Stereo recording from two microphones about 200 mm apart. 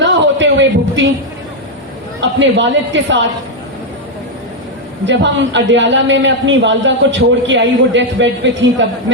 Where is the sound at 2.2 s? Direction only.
65° right (ahead or behind).